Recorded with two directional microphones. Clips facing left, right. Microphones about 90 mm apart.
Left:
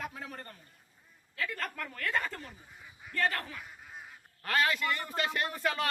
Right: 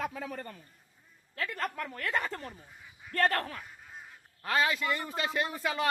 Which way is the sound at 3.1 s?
50° right (ahead or behind).